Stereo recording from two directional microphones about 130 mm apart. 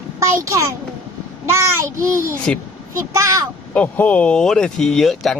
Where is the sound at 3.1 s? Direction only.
25° right (ahead or behind).